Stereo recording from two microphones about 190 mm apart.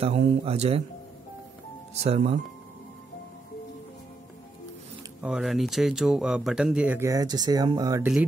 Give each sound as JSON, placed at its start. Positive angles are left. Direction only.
{"t": 0.0, "sound": "speech", "side_deg": -30}
{"t": 2.0, "sound": "speech", "side_deg": -35}
{"t": 5.2, "sound": "speech", "side_deg": -5}